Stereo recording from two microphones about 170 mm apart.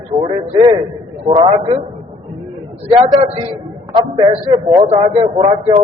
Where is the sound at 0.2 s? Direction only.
35° right (ahead or behind).